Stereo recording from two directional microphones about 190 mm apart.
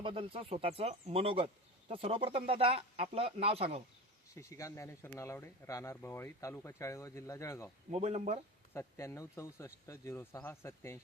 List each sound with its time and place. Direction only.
0.0 s speech: 25° right (ahead or behind)
4.4 s speech: 15° left (ahead or behind)
7.9 s speech: 35° right (ahead or behind)
8.7 s speech: 15° left (ahead or behind)